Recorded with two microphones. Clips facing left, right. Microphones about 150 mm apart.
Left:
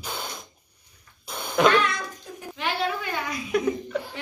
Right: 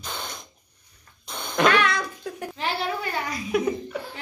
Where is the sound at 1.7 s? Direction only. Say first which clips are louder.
Right 1 dB; 80° right.